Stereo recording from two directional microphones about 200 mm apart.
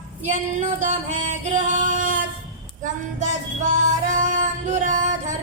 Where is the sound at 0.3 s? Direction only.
40° right (ahead or behind).